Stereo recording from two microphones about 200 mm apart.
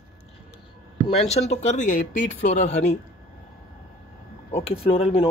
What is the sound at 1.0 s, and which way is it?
Speech, 30° left (ahead or behind).